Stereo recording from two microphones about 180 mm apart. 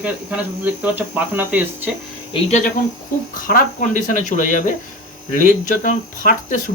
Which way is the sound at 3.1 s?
50° left (ahead or behind).